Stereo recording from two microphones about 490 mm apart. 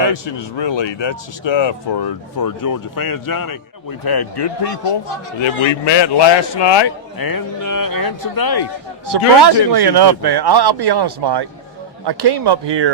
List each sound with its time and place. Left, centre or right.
0.0 s speech: left
5.4 s speech: left
9.0 s a man's voice: right